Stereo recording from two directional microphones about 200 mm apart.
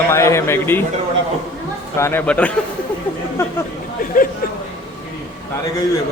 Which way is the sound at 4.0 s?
45° left (ahead or behind).